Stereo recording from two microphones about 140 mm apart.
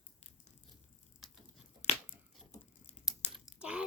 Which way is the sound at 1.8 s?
55° left (ahead or behind).